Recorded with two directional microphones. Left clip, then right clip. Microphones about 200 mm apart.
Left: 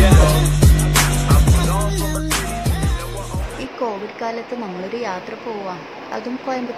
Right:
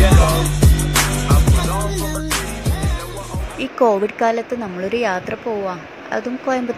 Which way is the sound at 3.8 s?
25° right (ahead or behind).